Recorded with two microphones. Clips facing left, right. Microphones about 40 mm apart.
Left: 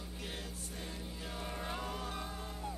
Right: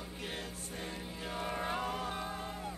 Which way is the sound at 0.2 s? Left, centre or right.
Right.